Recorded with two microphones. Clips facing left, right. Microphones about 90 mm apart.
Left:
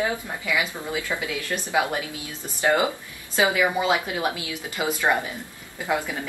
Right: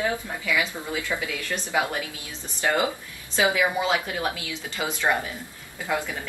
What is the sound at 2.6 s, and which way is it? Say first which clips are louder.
A woman's voice: left 3 dB; 20° left (ahead or behind).